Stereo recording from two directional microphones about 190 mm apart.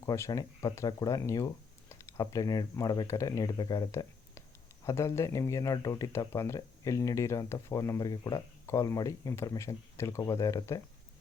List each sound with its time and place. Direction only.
0.0 s speech: 15° left (ahead or behind)